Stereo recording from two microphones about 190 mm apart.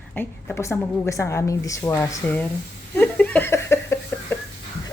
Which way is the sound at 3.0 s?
10° left (ahead or behind).